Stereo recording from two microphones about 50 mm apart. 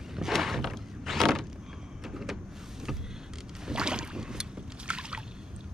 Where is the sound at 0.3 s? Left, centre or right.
Centre.